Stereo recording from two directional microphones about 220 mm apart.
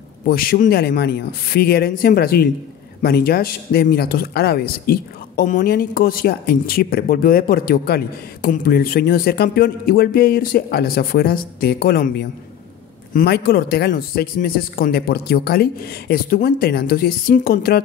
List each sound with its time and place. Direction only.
0.3 s speech: 40° left (ahead or behind)